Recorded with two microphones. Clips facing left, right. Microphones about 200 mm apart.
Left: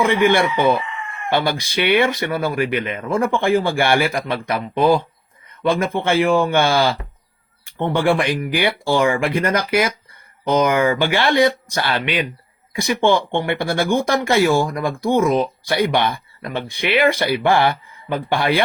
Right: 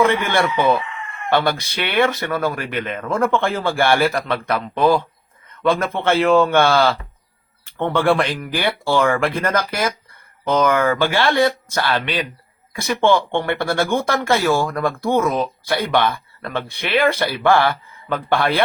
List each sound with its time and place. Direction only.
0.0 s speech: 10° left (ahead or behind)